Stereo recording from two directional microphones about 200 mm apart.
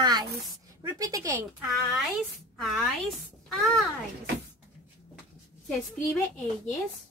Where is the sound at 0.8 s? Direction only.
15° right (ahead or behind).